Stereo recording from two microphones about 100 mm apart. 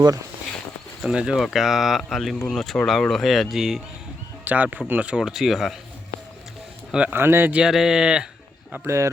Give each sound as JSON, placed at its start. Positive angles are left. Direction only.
{"t": 1.0, "sound": "speech", "side_deg": -5}
{"t": 4.4, "sound": "speech", "side_deg": -15}
{"t": 6.9, "sound": "speech", "side_deg": -15}
{"t": 7.5, "sound": "speech", "side_deg": -5}
{"t": 8.7, "sound": "speech", "side_deg": -25}